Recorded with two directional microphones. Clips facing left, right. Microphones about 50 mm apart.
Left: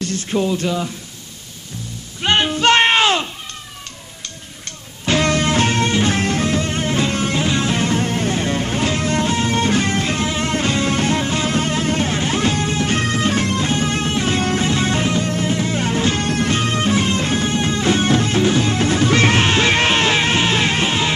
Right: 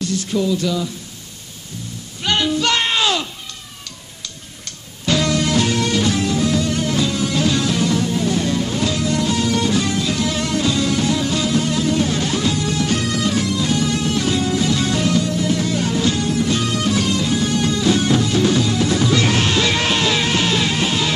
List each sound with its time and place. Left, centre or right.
0.0 s speech: left
2.2 s a sound: left
5.0 s music: left
7.3 s music: left